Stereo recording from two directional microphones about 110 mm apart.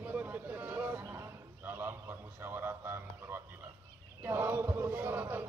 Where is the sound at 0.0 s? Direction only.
15° right (ahead or behind).